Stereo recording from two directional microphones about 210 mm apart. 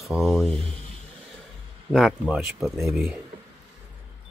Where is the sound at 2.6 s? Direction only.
10° right (ahead or behind).